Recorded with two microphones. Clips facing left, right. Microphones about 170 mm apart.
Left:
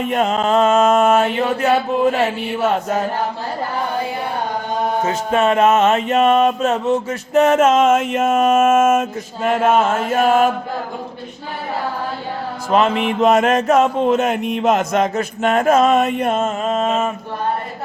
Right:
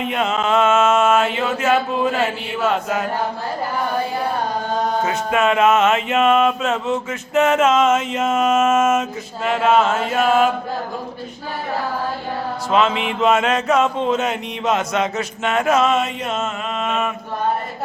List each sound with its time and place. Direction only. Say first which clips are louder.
0.0 s chant: left 3 dB; 45° left (ahead or behind)
5.0 s music: left 3 dB; 35° left (ahead or behind); by 10.5 s 50° left (ahead or behind)
12.7 s music: left 3 dB; 45° left (ahead or behind)
16.8 s chant: left 1 dB; 30° left (ahead or behind)